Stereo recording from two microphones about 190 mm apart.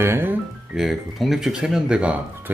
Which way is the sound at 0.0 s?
10° right (ahead or behind).